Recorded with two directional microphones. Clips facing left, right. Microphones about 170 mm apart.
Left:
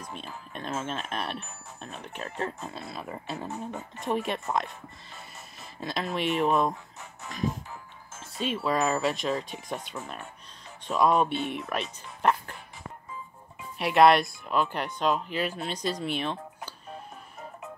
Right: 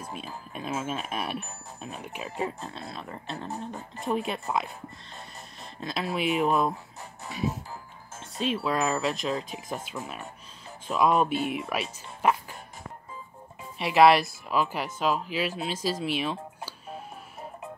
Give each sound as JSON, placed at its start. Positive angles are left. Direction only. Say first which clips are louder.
{"t": 0.5, "sound": "speech", "louder": "right 1 dB", "side_deg": -5}
{"t": 2.6, "sound": "speech", "louder": "left 1 dB", "side_deg": 5}
{"t": 3.4, "sound": "speech", "louder": "even", "side_deg": -35}
{"t": 4.0, "sound": "speech", "louder": "even", "side_deg": 0}
{"t": 7.2, "sound": "speech", "louder": "right 2 dB", "side_deg": -35}
{"t": 8.2, "sound": "speech", "louder": "right 2 dB", "side_deg": 0}
{"t": 13.7, "sound": "speech", "louder": "right 1 dB", "side_deg": 0}